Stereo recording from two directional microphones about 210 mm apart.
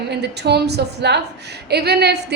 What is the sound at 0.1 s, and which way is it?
A woman's voice, 50° right (ahead or behind).